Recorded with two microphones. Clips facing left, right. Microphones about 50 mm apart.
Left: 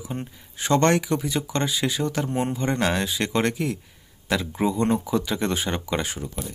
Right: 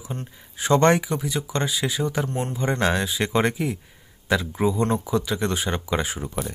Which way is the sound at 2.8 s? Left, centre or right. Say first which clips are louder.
Right 3 dB; centre.